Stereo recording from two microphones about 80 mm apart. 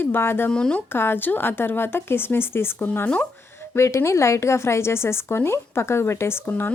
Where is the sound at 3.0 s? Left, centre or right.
Centre.